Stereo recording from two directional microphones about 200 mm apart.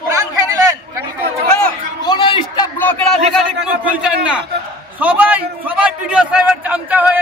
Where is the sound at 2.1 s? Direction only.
25° left (ahead or behind).